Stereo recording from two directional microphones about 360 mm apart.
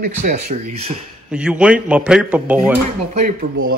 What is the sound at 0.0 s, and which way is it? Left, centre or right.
Speech, centre.